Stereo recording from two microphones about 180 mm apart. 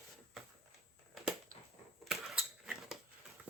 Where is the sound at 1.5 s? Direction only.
50° right (ahead or behind).